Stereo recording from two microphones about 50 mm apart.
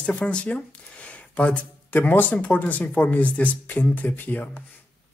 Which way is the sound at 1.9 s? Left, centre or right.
Left.